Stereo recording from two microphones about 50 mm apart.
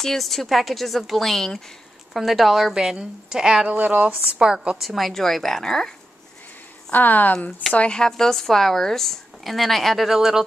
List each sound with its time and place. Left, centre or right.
0.0 s a woman's voice: centre
2.7 s a woman's voice: centre
3.6 s speech: right
4.4 s a woman's voice: centre
4.8 s a woman's voice: centre
6.9 s speech: left
7.7 s speech: left
8.0 s a woman's voice: centre